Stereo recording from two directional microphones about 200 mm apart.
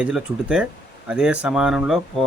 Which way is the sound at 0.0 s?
5° right (ahead or behind).